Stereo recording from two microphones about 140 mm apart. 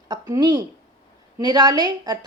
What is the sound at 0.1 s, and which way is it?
A woman's voice, 30° right (ahead or behind).